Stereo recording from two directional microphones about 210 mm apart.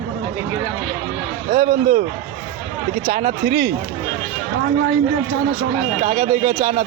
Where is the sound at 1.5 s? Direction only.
40° right (ahead or behind).